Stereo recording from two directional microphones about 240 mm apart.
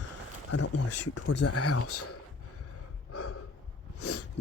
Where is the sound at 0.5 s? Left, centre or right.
Left.